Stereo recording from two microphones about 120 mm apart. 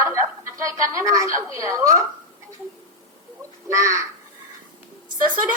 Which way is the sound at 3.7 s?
25° right (ahead or behind).